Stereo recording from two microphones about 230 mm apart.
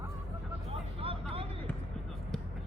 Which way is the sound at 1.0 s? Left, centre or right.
Right.